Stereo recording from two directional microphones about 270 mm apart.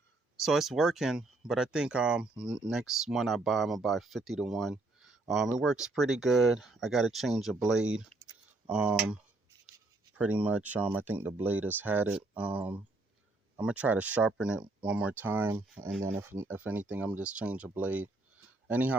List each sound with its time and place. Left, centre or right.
0.3 s speech: centre
8.1 s typing: right
8.6 s speech: centre